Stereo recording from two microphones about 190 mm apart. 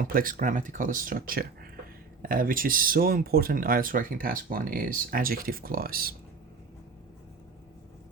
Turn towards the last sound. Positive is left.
turn(degrees=-50)  # may be behind; listen again after turning